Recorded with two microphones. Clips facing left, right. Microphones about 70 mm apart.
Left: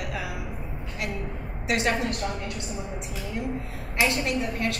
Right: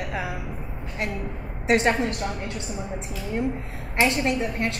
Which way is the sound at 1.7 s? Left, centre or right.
Right.